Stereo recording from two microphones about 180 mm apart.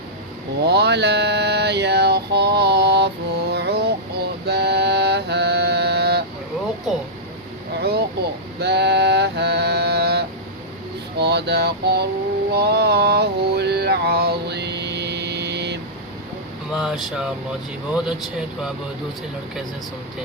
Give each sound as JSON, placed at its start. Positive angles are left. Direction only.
{"t": 0.6, "sound": "mantra", "side_deg": -65}
{"t": 4.4, "sound": "music", "side_deg": -65}
{"t": 7.8, "sound": "a sound", "side_deg": -65}
{"t": 16.7, "sound": "speech", "side_deg": -5}